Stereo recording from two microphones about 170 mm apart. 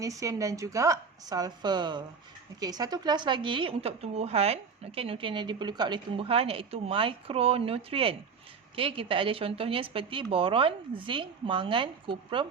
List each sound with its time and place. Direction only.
0.0 s a woman's voice: 20° right (ahead or behind)